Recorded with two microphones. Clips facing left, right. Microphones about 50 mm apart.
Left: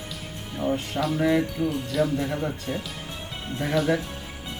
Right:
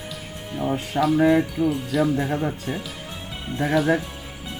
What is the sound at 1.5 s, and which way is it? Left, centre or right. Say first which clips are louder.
Speech: right 3 dB; centre.